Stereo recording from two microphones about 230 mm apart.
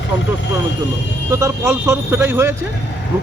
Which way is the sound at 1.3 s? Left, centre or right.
Centre.